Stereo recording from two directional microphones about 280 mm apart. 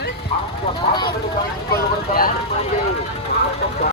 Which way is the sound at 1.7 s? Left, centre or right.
Left.